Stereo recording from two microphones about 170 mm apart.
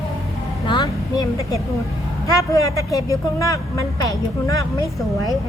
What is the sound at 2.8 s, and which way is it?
Speech, 20° left (ahead or behind).